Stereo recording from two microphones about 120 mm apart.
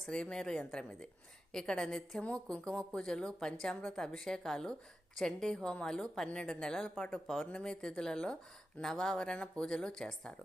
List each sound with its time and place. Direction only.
0.0 s a woman's voice: 5° left (ahead or behind)